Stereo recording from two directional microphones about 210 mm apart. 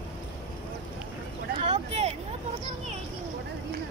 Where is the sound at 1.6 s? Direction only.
30° right (ahead or behind).